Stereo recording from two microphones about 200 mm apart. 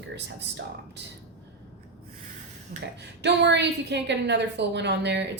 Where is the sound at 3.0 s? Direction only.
60° right (ahead or behind).